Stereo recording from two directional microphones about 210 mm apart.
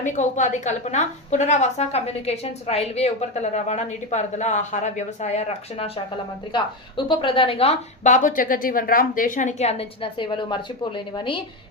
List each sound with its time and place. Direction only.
0.0 s a woman's voice: 35° left (ahead or behind)